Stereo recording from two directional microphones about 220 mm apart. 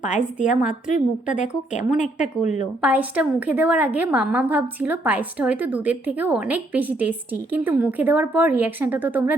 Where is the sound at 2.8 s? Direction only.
5° right (ahead or behind).